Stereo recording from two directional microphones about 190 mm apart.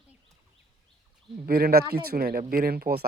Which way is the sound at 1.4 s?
55° right (ahead or behind).